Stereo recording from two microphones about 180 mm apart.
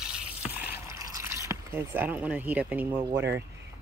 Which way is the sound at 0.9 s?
20° right (ahead or behind).